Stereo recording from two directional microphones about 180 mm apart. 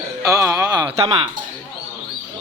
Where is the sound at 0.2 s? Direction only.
20° right (ahead or behind).